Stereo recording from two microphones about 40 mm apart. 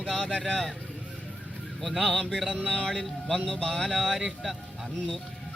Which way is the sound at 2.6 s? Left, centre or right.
Centre.